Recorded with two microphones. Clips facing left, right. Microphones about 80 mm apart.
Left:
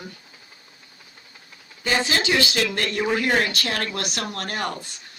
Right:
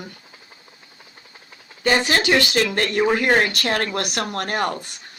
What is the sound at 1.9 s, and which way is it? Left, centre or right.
Speech, right.